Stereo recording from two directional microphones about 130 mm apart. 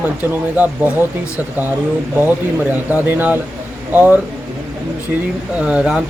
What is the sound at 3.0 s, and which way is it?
Speech, 15° right (ahead or behind).